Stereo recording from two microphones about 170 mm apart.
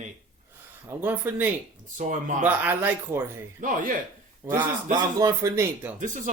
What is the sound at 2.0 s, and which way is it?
Speech, 50° right (ahead or behind).